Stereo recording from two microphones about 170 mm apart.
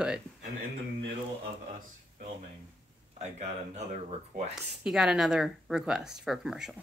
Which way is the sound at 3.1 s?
40° right (ahead or behind).